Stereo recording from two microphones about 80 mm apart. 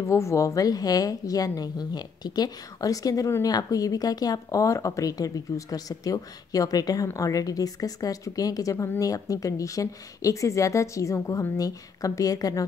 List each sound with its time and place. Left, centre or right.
0.0 s speech: left